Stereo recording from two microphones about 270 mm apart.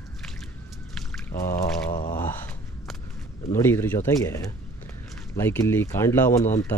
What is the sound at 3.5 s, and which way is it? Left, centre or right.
Speech, centre.